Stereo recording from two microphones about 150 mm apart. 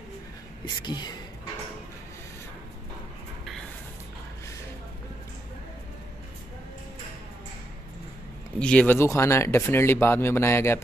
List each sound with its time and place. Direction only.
0.8 s speech: 30° left (ahead or behind)
8.5 s speech: 5° left (ahead or behind)